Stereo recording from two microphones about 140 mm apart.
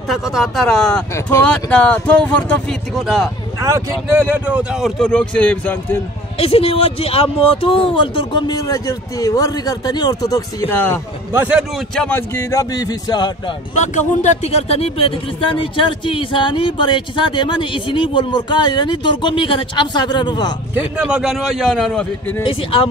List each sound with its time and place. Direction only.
0.1 s a man's voice: centre (ahead or behind)
1.1 s a man's voice: 20° left (ahead or behind)
1.5 s a man's voice: 10° left (ahead or behind)
3.6 s speech: 20° right (ahead or behind); by 5.9 s 10° left (ahead or behind)
6.3 s speech: 45° left (ahead or behind); by 10.8 s 25° left (ahead or behind)
11.3 s speech: 15° right (ahead or behind)
12.1 s a man's voice: 15° left (ahead or behind)
13.7 s speech: 55° left (ahead or behind); by 20.5 s 30° left (ahead or behind)
21.0 s a man's voice: 5° right (ahead or behind)
22.4 s speech: 40° left (ahead or behind)